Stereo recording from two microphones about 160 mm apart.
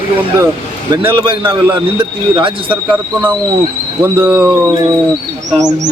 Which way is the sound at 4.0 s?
10° right (ahead or behind).